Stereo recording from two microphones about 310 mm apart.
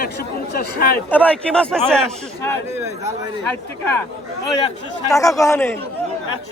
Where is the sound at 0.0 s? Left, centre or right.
Left.